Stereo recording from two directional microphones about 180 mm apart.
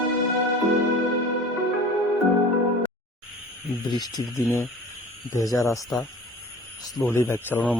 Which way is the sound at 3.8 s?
25° left (ahead or behind).